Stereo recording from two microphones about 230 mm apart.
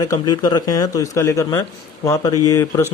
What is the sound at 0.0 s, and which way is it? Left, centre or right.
A man's voice, centre.